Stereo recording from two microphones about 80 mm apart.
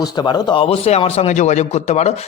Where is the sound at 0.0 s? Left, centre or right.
Left.